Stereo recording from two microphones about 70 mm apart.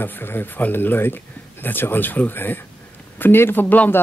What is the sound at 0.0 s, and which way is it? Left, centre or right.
Speech, left.